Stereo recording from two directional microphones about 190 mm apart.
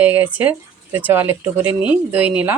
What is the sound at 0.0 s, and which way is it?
Speech, 10° right (ahead or behind).